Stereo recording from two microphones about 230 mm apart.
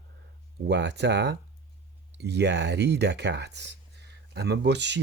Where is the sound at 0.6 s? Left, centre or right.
Right.